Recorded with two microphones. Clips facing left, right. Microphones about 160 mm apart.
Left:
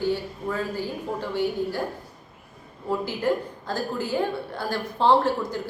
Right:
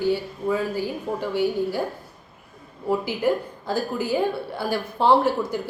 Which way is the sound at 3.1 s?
10° right (ahead or behind).